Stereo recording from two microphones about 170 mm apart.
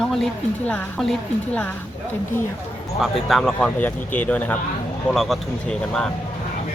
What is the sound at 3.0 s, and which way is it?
A woman's voice, centre (ahead or behind).